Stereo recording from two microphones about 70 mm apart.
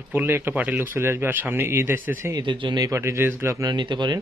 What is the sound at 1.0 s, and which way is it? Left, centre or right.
A man's voice, right.